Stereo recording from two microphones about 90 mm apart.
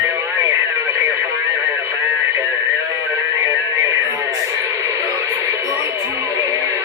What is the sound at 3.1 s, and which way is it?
Music, 35° right (ahead or behind).